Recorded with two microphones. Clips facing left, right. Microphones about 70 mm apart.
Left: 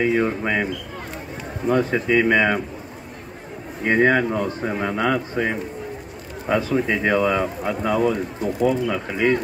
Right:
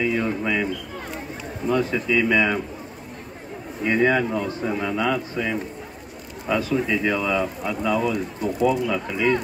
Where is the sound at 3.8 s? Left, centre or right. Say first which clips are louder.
Left 2 dB; left.